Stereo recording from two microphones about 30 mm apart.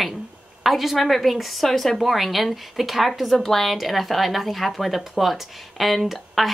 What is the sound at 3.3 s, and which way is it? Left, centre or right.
A woman's voice, centre.